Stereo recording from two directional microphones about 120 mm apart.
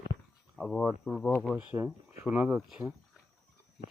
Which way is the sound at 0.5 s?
5° left (ahead or behind).